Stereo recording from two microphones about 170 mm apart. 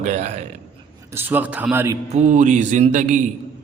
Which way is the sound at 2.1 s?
45° right (ahead or behind).